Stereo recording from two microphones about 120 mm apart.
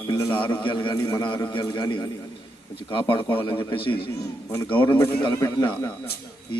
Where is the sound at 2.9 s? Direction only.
45° left (ahead or behind); by 5.9 s 30° left (ahead or behind).